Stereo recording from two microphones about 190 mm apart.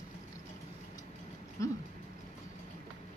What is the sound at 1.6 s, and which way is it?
Speech, 15° left (ahead or behind).